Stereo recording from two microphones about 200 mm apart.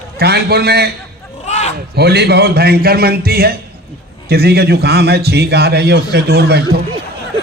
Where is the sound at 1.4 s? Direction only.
35° left (ahead or behind).